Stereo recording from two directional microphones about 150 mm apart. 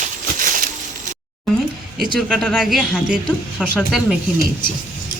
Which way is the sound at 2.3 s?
5° left (ahead or behind).